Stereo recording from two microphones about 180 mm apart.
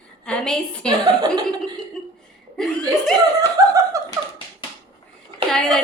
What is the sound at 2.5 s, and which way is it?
Speech, centre (ahead or behind).